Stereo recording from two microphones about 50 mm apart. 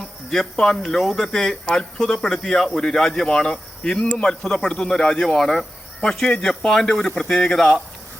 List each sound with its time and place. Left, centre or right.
0.3 s speech: centre